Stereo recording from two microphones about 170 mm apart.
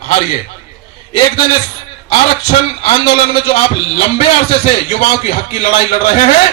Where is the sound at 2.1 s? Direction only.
35° left (ahead or behind).